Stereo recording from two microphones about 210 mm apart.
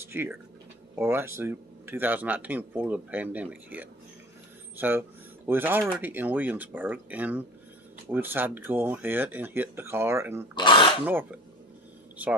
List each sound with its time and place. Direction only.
0.0 s speech: 10° right (ahead or behind)
10.5 s throat clearing: 20° left (ahead or behind)
11.1 s speech: 10° right (ahead or behind)